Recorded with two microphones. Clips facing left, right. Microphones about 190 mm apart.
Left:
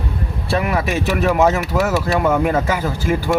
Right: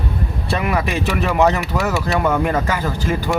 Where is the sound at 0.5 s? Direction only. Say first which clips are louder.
Left 2 dB; centre (ahead or behind).